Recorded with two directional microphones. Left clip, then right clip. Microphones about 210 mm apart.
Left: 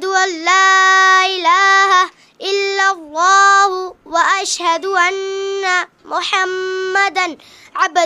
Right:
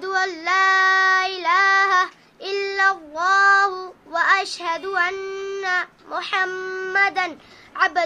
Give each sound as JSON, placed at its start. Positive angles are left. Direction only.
{"t": 0.0, "sound": "child singing", "side_deg": 50}